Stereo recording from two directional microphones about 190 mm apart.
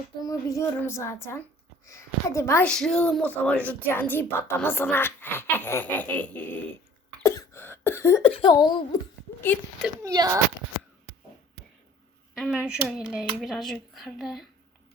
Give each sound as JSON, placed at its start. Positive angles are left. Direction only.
{"t": 0.2, "sound": "speech", "side_deg": 20}
{"t": 7.2, "sound": "cough", "side_deg": 15}
{"t": 8.2, "sound": "speech", "side_deg": 30}
{"t": 10.0, "sound": "speech", "side_deg": -20}
{"t": 12.3, "sound": "speech", "side_deg": 0}